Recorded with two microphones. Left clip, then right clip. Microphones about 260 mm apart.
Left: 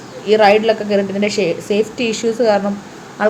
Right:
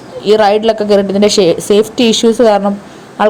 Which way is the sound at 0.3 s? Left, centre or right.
Right.